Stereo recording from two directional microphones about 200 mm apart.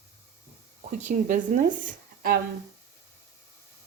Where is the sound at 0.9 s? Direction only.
40° right (ahead or behind).